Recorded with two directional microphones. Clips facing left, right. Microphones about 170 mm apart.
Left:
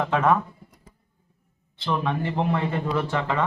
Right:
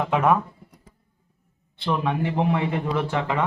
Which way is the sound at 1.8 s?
10° right (ahead or behind).